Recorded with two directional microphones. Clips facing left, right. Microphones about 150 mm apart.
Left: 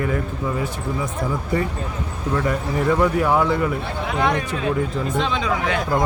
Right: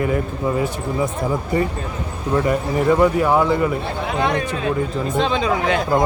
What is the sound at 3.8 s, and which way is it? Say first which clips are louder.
Speech: right 1 dB; 30° right (ahead or behind).